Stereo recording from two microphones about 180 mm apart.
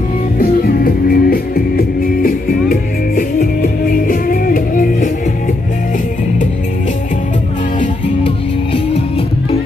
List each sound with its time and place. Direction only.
0.4 s music: 55° left (ahead or behind)